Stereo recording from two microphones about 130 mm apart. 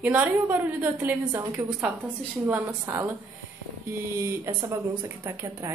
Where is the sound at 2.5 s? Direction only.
15° right (ahead or behind).